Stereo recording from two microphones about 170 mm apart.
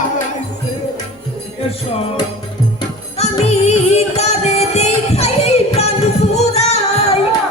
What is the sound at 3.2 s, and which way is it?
Music, 40° left (ahead or behind).